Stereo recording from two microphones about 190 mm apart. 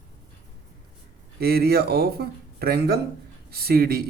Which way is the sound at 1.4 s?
55° right (ahead or behind).